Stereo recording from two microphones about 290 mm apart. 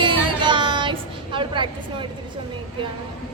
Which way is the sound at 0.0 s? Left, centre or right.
Centre.